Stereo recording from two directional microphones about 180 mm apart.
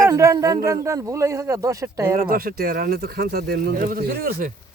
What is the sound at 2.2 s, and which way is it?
Speech, 55° right (ahead or behind).